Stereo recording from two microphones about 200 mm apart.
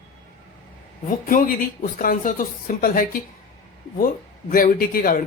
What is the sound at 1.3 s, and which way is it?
Speech, 40° left (ahead or behind).